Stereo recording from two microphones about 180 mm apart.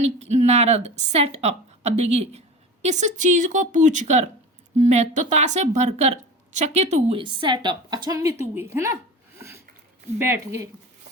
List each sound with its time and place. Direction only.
0.0 s a woman's voice: 40° right (ahead or behind); by 9.0 s 15° right (ahead or behind)
10.2 s speech: 15° right (ahead or behind)